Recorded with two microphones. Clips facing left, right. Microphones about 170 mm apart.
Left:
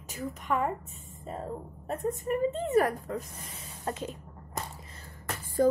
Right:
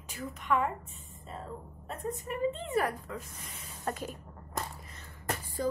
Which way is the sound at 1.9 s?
45° left (ahead or behind).